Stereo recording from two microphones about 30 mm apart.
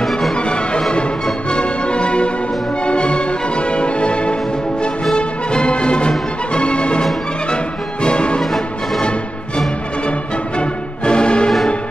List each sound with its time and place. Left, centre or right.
0.0 s music: centre
0.4 s music: left
8.4 s music: centre
10.6 s music: left